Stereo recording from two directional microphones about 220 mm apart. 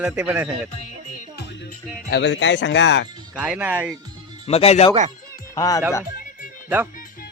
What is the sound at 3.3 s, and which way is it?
Speech, 5° right (ahead or behind).